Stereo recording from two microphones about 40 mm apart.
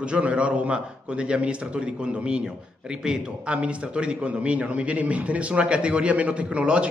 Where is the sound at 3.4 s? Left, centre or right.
Right.